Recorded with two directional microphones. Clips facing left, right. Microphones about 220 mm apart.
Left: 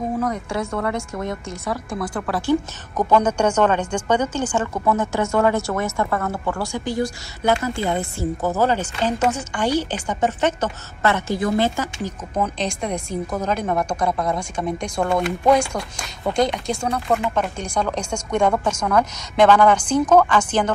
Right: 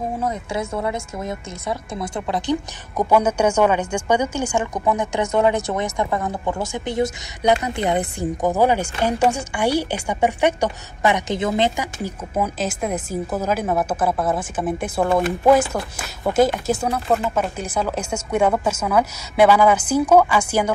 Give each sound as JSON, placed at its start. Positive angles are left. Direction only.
{"t": 0.6, "sound": "a woman's voice", "side_deg": -25}
{"t": 3.0, "sound": "a woman's voice", "side_deg": -10}